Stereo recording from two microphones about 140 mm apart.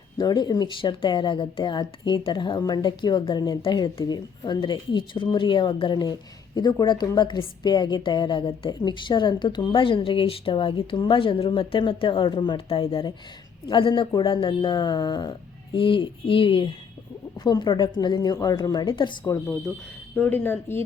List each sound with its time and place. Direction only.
0.2 s speech: 30° left (ahead or behind)
20.1 s speech: 10° left (ahead or behind)